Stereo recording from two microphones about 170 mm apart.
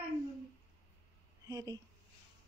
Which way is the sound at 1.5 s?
20° right (ahead or behind).